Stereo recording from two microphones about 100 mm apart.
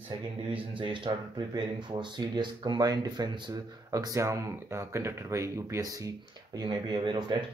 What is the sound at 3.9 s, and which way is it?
Speech, 35° right (ahead or behind).